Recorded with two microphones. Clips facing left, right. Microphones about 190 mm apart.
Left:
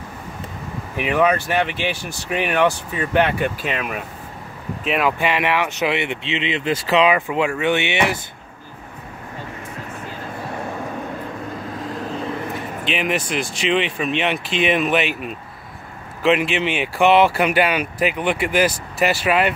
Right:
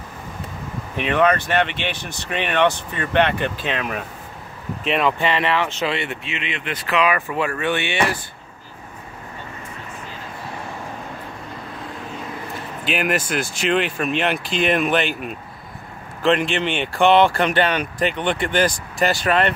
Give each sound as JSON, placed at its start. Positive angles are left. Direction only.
{"t": 0.9, "sound": "speech", "side_deg": 10}
{"t": 6.6, "sound": "speech", "side_deg": 25}
{"t": 7.2, "sound": "speech", "side_deg": 15}
{"t": 12.8, "sound": "speech", "side_deg": 0}